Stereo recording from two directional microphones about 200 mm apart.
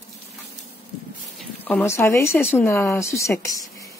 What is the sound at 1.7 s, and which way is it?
Speech, 10° left (ahead or behind).